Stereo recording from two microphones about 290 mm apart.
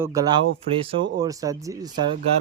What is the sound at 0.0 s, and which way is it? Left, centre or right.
Speech, centre.